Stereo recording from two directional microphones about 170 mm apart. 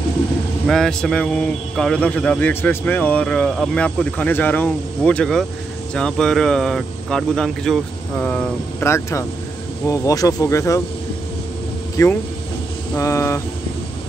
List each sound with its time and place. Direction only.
0.7 s a man's voice: centre (ahead or behind); by 10.8 s 20° left (ahead or behind)
12.0 s a man's voice: 20° left (ahead or behind)